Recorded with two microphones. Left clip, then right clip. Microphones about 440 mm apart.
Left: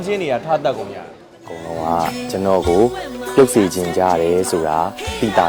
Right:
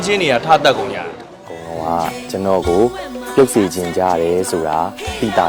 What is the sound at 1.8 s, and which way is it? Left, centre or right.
Speech, centre.